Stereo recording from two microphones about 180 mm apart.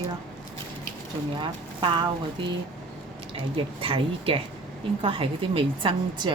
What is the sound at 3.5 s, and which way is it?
A woman's voice, 30° right (ahead or behind).